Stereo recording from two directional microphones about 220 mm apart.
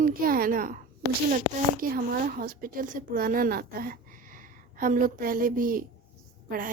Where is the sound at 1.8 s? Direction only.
40° right (ahead or behind).